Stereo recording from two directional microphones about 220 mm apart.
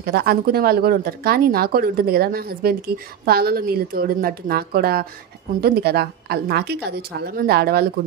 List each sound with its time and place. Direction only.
0.0 s speech: 45° right (ahead or behind)